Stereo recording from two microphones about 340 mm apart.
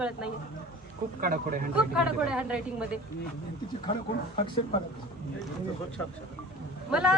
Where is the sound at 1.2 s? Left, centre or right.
Right.